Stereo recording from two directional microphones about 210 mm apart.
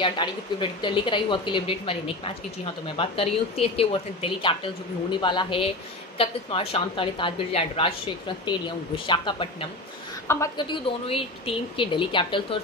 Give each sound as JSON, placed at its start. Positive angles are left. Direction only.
{"t": 0.0, "sound": "speech", "side_deg": 20}
{"t": 10.2, "sound": "a woman's voice", "side_deg": 10}
{"t": 10.7, "sound": "speech", "side_deg": 25}